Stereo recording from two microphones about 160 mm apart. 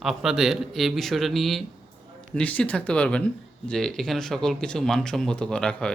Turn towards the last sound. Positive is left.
turn(degrees=5)  # may be behind; listen again after turning